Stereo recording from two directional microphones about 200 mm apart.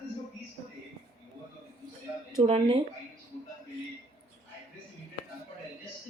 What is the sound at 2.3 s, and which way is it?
Speech, 30° right (ahead or behind).